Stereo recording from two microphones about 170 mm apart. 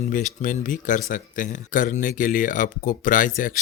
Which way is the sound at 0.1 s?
50° left (ahead or behind).